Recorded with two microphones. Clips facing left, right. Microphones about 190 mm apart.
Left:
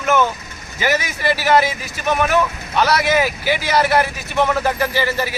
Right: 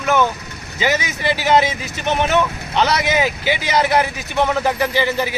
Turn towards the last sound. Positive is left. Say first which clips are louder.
# right 1 dB
turn(degrees=-20)  # may be behind; listen again after turning